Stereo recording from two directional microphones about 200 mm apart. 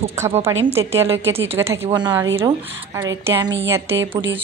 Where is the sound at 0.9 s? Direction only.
10° right (ahead or behind).